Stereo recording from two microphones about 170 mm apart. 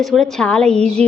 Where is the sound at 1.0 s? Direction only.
40° right (ahead or behind).